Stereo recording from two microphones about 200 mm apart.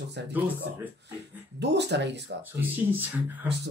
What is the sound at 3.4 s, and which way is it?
Speech, 60° right (ahead or behind).